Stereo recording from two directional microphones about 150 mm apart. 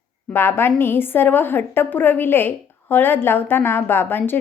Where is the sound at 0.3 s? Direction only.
15° left (ahead or behind).